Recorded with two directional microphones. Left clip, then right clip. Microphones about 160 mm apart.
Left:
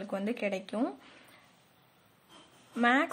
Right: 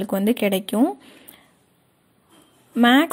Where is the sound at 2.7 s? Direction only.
45° right (ahead or behind).